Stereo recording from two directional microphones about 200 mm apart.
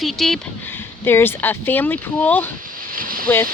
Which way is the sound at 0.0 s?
Centre (ahead or behind).